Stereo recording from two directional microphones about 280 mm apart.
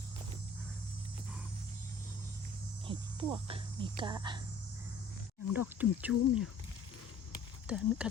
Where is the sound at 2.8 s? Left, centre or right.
Centre.